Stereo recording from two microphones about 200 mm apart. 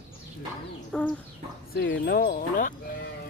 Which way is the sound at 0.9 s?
5° left (ahead or behind).